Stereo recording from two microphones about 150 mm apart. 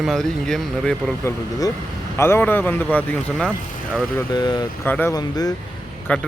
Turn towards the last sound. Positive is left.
turn(degrees=10)  # may be behind; listen again after turning